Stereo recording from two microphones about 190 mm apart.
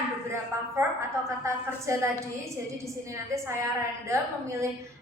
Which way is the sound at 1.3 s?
15° right (ahead or behind).